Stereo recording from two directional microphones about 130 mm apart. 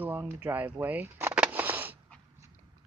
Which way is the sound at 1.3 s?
10° right (ahead or behind).